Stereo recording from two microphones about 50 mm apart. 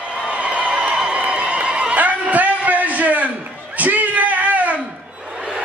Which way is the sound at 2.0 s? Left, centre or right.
Right.